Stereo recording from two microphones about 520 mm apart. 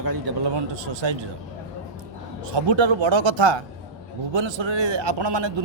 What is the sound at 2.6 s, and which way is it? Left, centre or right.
A man's voice, right.